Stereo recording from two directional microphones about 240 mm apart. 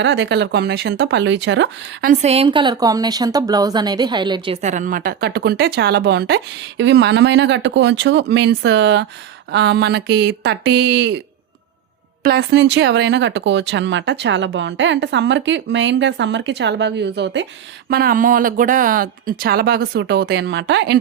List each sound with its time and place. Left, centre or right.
0.0 s speech: right
2.0 s a woman's voice: right
4.6 s speech: right
12.2 s speech: right